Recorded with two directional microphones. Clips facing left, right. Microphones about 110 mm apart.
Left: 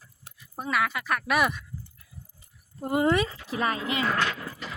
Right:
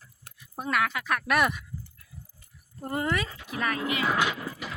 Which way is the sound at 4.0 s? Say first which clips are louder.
Right 1 dB; 10° right (ahead or behind).